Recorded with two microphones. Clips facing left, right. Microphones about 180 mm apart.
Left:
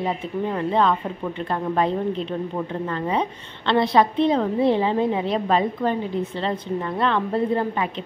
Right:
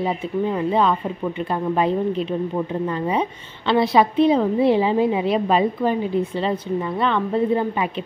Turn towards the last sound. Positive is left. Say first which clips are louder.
# right 2 dB
turn(degrees=-10)  # may be behind; listen again after turning